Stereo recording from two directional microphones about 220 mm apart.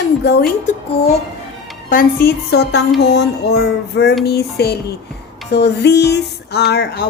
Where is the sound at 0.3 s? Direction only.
45° left (ahead or behind).